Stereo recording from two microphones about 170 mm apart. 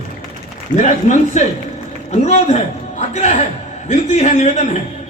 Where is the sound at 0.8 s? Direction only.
45° left (ahead or behind).